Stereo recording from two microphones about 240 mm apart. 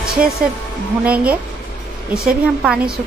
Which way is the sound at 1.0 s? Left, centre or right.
Centre.